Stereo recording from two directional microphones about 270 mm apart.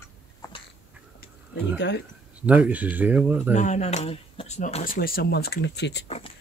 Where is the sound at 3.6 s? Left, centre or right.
Left.